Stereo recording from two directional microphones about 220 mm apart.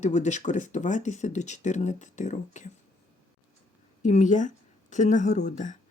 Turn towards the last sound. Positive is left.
turn(degrees=35)  # may be behind; listen again after turning